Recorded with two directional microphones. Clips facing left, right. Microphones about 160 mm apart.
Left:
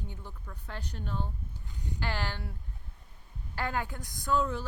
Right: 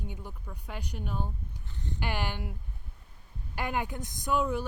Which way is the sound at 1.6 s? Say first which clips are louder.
Right 1 dB; 10° left (ahead or behind).